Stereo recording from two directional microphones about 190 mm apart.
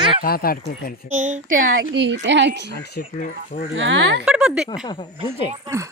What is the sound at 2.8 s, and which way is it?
Speech, 45° left (ahead or behind).